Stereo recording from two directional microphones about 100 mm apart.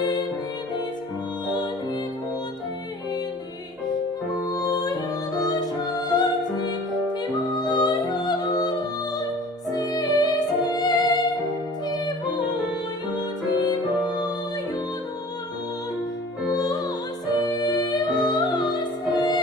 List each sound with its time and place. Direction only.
4.5 s music: 40° left (ahead or behind)
16.5 s music: 40° left (ahead or behind)